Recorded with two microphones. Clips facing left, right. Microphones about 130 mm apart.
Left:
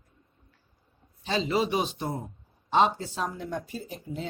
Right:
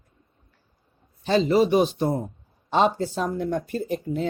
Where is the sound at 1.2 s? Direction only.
50° right (ahead or behind).